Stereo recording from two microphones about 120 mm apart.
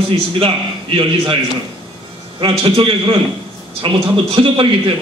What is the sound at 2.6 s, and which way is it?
A man's voice, 45° right (ahead or behind).